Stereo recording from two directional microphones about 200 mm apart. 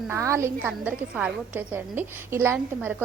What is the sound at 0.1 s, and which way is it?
A woman's voice, 15° right (ahead or behind).